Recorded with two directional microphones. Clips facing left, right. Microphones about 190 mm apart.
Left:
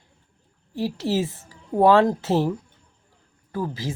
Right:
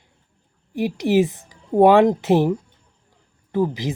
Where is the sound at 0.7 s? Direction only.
15° right (ahead or behind).